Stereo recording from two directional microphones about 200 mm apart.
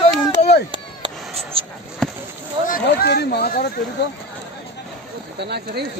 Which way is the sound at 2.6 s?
50° left (ahead or behind).